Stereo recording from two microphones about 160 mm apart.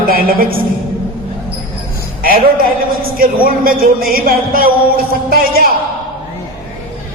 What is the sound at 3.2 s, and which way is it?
A man's voice, 65° right (ahead or behind).